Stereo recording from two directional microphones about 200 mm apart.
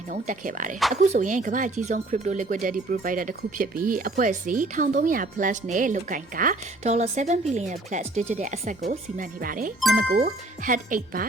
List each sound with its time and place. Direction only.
0.1 s speech: 40° right (ahead or behind)